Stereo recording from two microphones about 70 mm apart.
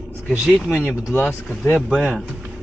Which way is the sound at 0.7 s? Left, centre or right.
Left.